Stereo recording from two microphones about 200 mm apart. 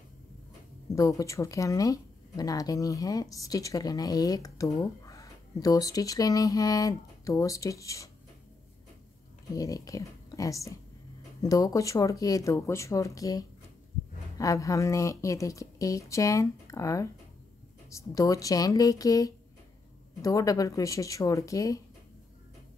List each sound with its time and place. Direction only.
0.8 s speech: 15° left (ahead or behind)
9.5 s speech: 15° left (ahead or behind)